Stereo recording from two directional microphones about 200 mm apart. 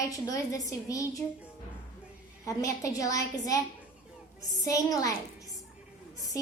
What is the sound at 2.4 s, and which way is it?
A woman's voice, 15° left (ahead or behind).